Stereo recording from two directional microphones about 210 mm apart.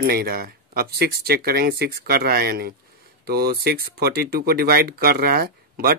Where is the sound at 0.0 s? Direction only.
45° right (ahead or behind).